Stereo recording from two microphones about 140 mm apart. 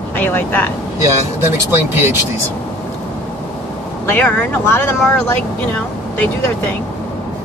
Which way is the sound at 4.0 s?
15° left (ahead or behind).